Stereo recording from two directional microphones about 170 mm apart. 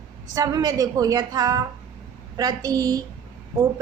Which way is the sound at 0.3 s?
20° right (ahead or behind).